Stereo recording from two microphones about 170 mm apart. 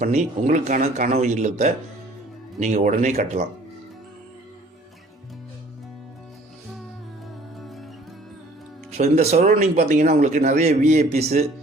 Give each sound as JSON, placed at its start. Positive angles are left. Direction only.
{"t": 0.0, "sound": "speech", "side_deg": -45}
{"t": 7.6, "sound": "music", "side_deg": 0}
{"t": 9.0, "sound": "a man's voice", "side_deg": -40}